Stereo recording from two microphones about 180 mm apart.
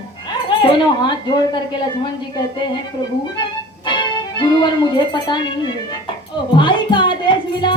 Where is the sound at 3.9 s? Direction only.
25° left (ahead or behind).